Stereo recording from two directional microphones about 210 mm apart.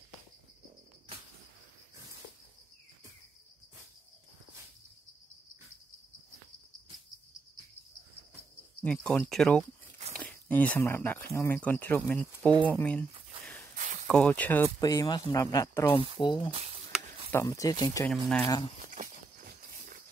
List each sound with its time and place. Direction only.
8.8 s speech: 5° left (ahead or behind)
14.0 s speech: 5° left (ahead or behind); by 16.5 s 20° left (ahead or behind)
16.5 s a sound: 30° right (ahead or behind)
17.3 s speech: 15° left (ahead or behind)
18.1 s speech: 5° left (ahead or behind)
18.9 s a sound: 40° right (ahead or behind)